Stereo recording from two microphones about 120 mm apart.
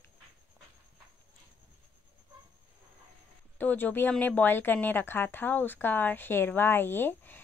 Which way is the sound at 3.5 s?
15° left (ahead or behind).